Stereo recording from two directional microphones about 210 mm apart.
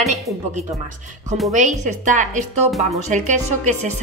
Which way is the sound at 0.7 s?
35° right (ahead or behind).